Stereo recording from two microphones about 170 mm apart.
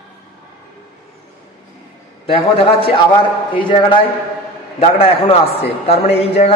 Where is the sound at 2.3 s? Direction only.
35° left (ahead or behind).